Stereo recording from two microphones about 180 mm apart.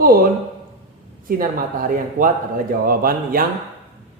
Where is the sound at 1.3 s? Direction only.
50° right (ahead or behind).